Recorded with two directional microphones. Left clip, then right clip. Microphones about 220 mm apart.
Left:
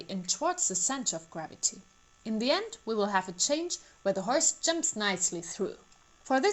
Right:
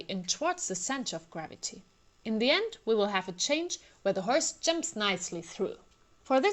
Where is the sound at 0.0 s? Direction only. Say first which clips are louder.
Even; 20° right (ahead or behind).